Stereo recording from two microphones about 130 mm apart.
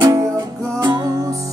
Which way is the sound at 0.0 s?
30° right (ahead or behind).